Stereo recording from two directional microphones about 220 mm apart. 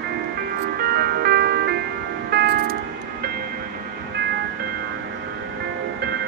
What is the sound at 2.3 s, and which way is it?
Music, 45° right (ahead or behind).